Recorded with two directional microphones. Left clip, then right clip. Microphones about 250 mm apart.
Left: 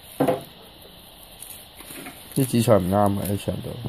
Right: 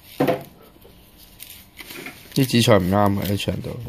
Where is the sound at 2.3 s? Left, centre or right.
Centre.